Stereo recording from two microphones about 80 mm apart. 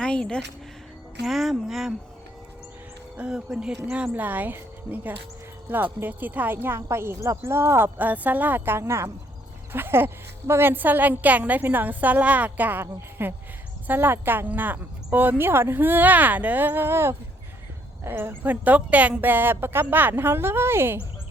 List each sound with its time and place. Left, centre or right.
0.0 s speech: centre
1.2 s speech: centre
3.2 s a woman's voice: centre; by 21.0 s right